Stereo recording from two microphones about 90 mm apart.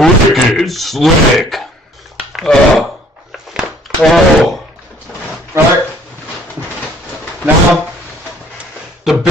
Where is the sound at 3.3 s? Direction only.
5° right (ahead or behind).